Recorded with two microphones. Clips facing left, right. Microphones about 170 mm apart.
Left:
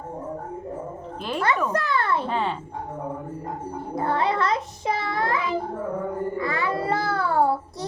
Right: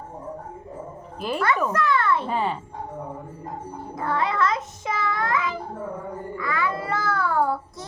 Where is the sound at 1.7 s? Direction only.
35° left (ahead or behind).